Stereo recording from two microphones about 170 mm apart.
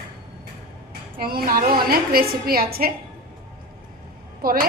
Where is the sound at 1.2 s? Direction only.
60° right (ahead or behind).